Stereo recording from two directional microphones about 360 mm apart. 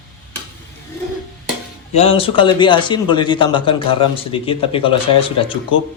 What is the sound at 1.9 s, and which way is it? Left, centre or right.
A man's voice, centre.